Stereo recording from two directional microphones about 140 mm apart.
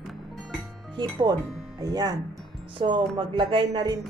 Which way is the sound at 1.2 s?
30° right (ahead or behind).